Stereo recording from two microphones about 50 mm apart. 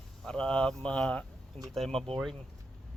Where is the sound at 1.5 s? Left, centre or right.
Centre.